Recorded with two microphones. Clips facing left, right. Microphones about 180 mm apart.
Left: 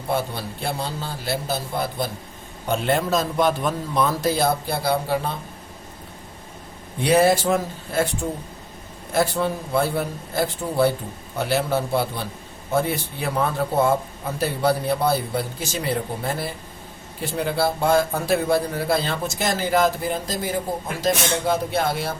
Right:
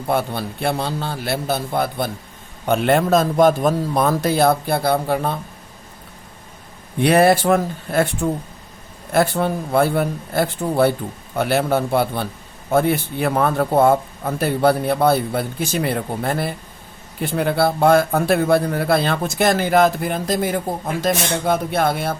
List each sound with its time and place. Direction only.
0.1 s a man's voice: 60° right (ahead or behind)
7.0 s a man's voice: 60° right (ahead or behind)
9.1 s a man's voice: 60° right (ahead or behind)